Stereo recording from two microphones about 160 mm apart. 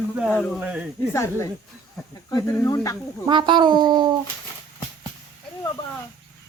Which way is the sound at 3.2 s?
30° right (ahead or behind).